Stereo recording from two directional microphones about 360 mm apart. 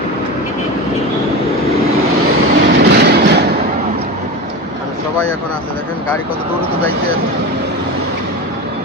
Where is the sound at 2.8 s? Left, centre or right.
Right.